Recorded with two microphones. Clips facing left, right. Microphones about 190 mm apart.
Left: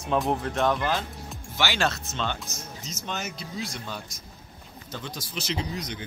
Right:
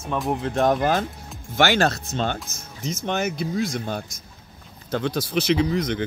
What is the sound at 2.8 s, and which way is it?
Speech, 55° right (ahead or behind).